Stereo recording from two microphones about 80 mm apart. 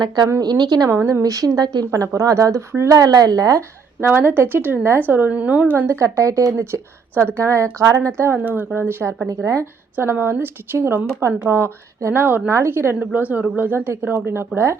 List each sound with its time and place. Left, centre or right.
0.4 s speech: right
0.9 s speech: right
1.2 s speech: right
1.9 s speech: right
4.0 s speech: right
5.9 s speech: right
8.5 s speech: right
9.2 s speech: right
9.9 s speech: right